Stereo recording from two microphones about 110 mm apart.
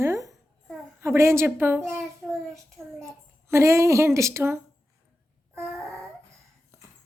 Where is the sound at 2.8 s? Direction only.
20° right (ahead or behind).